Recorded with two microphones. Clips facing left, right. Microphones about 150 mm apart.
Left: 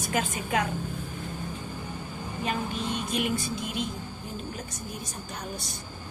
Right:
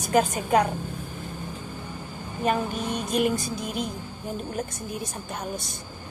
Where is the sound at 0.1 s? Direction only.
40° right (ahead or behind).